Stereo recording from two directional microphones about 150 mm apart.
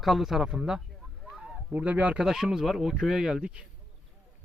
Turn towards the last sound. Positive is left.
turn(degrees=-5)  # may be behind; listen again after turning